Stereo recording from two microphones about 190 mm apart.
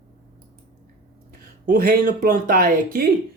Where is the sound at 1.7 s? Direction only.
50° right (ahead or behind).